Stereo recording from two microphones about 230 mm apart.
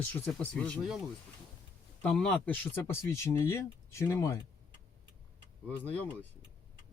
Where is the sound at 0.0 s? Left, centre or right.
Centre.